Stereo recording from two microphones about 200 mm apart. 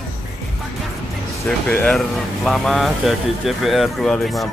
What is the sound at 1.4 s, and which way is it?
Speech, 5° left (ahead or behind).